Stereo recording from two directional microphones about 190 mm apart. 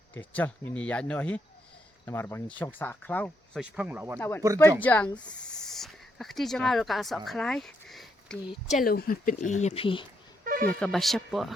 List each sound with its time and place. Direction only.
0.1 s speech: 10° left (ahead or behind)
3.6 s speech: 5° right (ahead or behind)
4.2 s speech: 15° left (ahead or behind)
8.6 s speech: 45° left (ahead or behind); by 10.1 s 25° left (ahead or behind)
10.4 s a sound: 50° right (ahead or behind)
10.7 s speech: 5° left (ahead or behind)